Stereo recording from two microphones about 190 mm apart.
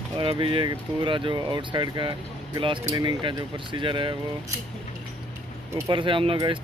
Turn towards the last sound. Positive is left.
turn(degrees=-25)  # may be behind; listen again after turning